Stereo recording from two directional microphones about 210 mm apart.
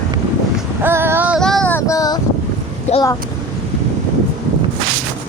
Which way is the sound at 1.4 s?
5° left (ahead or behind).